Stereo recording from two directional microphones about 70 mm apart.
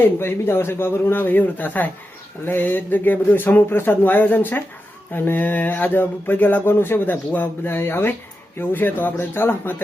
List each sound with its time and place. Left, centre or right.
0.2 s speech: left